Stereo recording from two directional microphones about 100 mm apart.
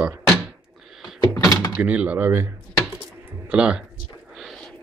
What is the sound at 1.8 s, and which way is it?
Speech, 15° right (ahead or behind).